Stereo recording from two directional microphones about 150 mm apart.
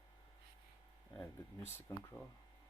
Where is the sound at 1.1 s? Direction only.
15° left (ahead or behind).